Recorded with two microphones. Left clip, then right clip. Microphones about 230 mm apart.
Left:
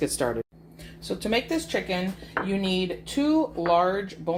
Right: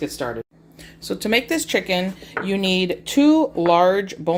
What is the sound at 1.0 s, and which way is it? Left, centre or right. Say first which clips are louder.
Speech: right 6 dB; right.